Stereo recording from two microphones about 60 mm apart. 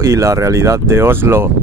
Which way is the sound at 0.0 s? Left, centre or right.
Right.